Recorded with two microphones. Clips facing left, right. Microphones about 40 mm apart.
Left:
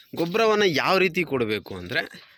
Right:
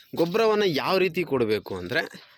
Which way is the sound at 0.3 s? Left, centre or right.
Left.